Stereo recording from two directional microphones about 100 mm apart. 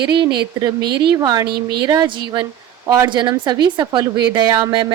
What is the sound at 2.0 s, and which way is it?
A woman's voice, 55° right (ahead or behind).